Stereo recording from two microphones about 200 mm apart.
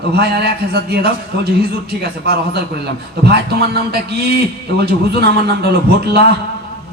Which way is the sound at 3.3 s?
50° right (ahead or behind).